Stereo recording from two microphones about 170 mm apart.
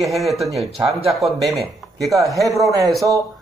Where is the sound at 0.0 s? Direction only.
Centre (ahead or behind).